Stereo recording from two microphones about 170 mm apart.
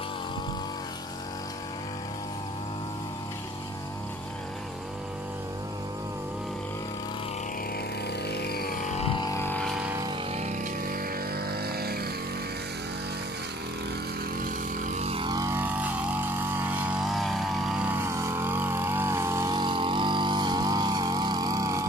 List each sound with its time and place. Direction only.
8.3 s vehicle: 70° left (ahead or behind); by 9.1 s 45° left (ahead or behind)
9.1 s vehicle: 25° left (ahead or behind)
9.4 s vehicle: 10° left (ahead or behind)
9.7 s vehicle: 5° right (ahead or behind)
10.3 s vehicle: 45° right (ahead or behind); by 12.1 s 65° right (ahead or behind)
14.4 s vehicle: 50° right (ahead or behind); by 21.8 s 20° right (ahead or behind)